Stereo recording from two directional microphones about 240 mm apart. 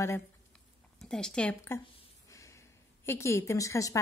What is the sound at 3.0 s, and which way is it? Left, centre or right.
A woman's voice, centre.